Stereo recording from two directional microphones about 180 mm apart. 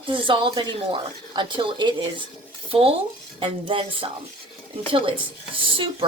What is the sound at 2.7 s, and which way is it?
Dishes, 30° right (ahead or behind).